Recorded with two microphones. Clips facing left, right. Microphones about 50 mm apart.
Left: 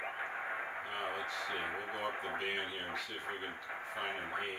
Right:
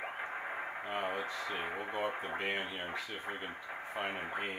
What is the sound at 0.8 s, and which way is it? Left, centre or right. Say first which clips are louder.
Speech: right 6 dB; centre.